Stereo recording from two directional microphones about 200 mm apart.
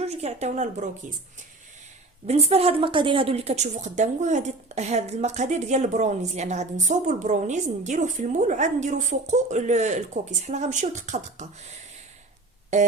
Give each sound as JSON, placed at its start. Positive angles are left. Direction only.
{"t": 0.0, "sound": "a woman's voice", "side_deg": -30}
{"t": 2.2, "sound": "a woman's voice", "side_deg": -30}
{"t": 12.7, "sound": "a woman's voice", "side_deg": -35}